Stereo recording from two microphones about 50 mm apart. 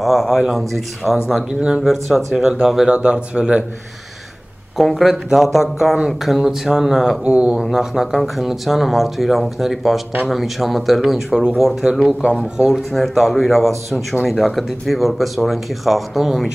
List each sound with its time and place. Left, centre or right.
0.0 s speech: centre
1.5 s speech: centre
1.8 s speech: centre
2.9 s speech: centre
4.7 s speech: centre
7.2 s speech: centre
12.9 s speech: centre